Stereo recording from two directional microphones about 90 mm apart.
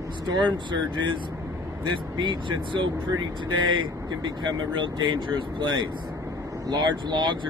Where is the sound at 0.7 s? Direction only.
60° right (ahead or behind).